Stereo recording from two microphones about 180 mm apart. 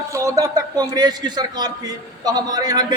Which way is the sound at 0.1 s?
20° right (ahead or behind).